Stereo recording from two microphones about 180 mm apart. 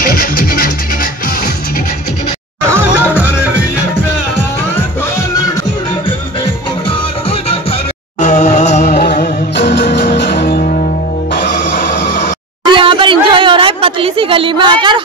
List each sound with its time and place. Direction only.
0.1 s music: 55° left (ahead or behind)
2.7 s music: 10° right (ahead or behind)
8.2 s music: 40° left (ahead or behind)
8.9 s music: 65° left (ahead or behind); by 10.9 s 45° left (ahead or behind)
11.3 s music: 65° left (ahead or behind)
12.6 s a sound: 25° right (ahead or behind)